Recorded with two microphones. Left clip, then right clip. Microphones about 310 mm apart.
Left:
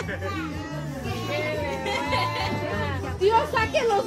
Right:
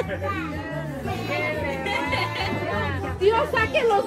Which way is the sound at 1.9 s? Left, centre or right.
Left.